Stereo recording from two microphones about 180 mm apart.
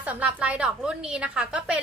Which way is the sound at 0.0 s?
10° right (ahead or behind).